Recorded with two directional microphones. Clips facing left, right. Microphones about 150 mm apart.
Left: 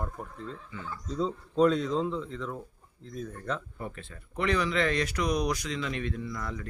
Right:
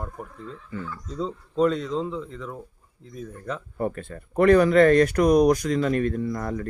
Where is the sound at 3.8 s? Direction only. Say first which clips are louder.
Right 11 dB; 50° right (ahead or behind).